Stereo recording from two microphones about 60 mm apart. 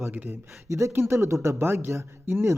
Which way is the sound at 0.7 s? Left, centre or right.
Right.